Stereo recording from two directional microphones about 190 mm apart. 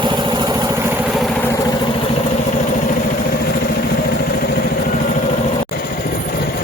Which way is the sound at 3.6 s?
55° left (ahead or behind).